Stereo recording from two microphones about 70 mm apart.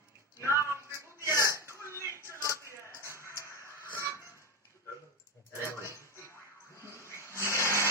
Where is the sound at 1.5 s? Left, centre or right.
Right.